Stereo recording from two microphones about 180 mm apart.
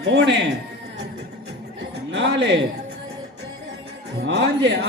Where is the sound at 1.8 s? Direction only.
85° right.